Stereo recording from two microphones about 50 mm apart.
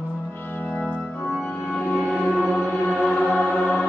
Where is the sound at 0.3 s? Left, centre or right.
Left.